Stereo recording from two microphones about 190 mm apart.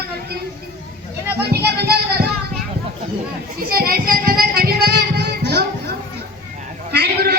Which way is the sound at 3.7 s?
50° right (ahead or behind).